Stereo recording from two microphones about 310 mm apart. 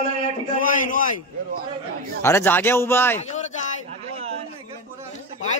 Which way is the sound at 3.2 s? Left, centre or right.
Left.